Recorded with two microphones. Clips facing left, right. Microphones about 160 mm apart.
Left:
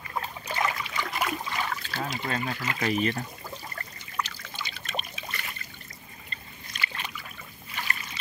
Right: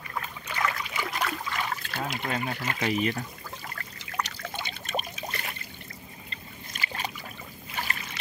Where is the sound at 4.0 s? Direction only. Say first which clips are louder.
Right 1 dB; 90° right.